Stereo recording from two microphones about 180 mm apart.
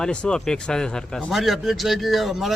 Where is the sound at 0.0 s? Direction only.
5° left (ahead or behind).